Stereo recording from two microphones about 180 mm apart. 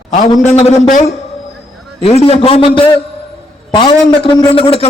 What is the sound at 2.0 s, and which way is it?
A man's voice, 35° left (ahead or behind).